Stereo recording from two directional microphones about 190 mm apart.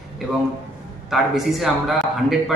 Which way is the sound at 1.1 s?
Centre (ahead or behind).